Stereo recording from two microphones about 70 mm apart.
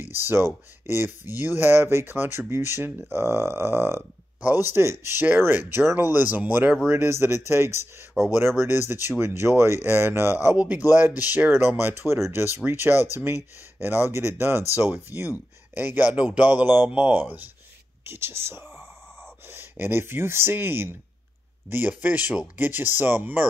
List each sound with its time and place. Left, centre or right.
0.1 s speech: right
6.9 s speech: right
10.5 s speech: right